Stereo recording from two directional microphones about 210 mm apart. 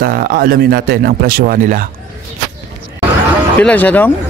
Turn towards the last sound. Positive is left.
turn(degrees=10)  # may be behind; listen again after turning